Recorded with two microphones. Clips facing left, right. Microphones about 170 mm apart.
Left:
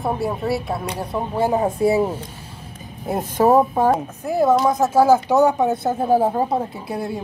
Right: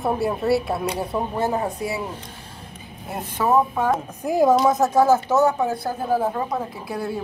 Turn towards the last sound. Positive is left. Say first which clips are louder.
# left 1 dB
turn(degrees=20)  # may be behind; listen again after turning